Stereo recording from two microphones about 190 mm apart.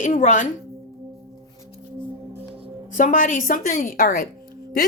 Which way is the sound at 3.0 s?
45° left (ahead or behind).